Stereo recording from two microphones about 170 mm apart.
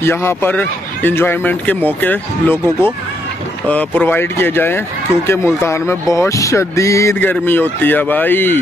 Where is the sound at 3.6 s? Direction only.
10° left (ahead or behind).